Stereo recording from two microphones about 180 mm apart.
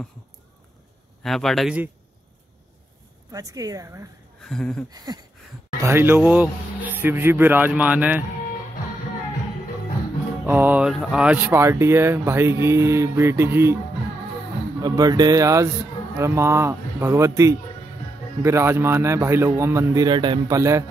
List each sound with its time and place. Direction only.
1.2 s speech: centre (ahead or behind)
3.3 s speech: 20° right (ahead or behind)
4.5 s speech: 5° left (ahead or behind)
4.9 s speech: 20° right (ahead or behind)
10.4 s speech: 10° right (ahead or behind)
14.8 s speech: 20° right (ahead or behind)